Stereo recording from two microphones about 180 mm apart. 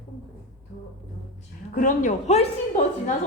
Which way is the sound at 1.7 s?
45° left (ahead or behind).